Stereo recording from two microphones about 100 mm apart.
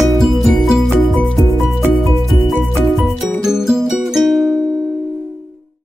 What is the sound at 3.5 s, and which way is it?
Music, 5° right (ahead or behind).